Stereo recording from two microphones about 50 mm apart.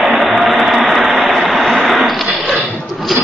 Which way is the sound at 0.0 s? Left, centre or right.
Centre.